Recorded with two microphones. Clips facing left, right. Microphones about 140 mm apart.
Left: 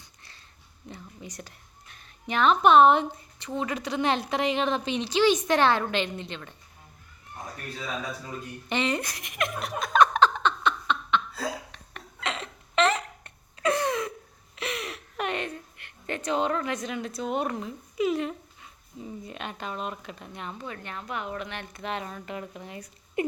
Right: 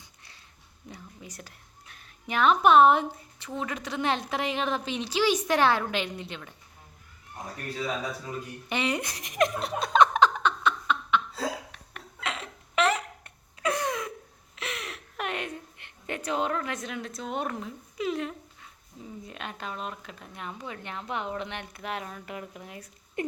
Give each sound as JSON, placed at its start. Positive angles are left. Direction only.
{"t": 0.9, "sound": "speech", "side_deg": -5}
{"t": 8.7, "sound": "speech", "side_deg": -10}
{"t": 9.0, "sound": "giggle", "side_deg": -35}
{"t": 10.0, "sound": "a sound", "side_deg": -15}
{"t": 11.7, "sound": "hiccup", "side_deg": -5}
{"t": 14.5, "sound": "a sound", "side_deg": 0}
{"t": 15.8, "sound": "a woman's voice", "side_deg": -10}
{"t": 20.6, "sound": "speech", "side_deg": -15}
{"t": 21.7, "sound": "speech", "side_deg": -5}
{"t": 23.2, "sound": "patter", "side_deg": 5}